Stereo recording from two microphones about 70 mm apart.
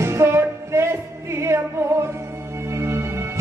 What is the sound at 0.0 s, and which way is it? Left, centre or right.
Music, right.